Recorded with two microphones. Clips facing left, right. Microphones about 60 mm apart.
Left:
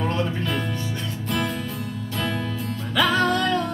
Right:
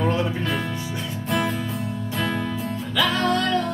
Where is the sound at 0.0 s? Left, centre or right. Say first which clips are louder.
Right 2 dB; centre.